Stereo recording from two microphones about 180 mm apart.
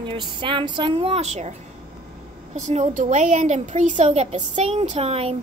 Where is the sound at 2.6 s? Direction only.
40° right (ahead or behind).